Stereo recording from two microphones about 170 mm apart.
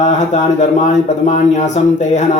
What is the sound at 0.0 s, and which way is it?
A man's voice, 40° left (ahead or behind).